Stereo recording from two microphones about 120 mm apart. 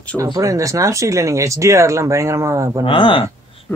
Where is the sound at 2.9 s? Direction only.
50° left (ahead or behind).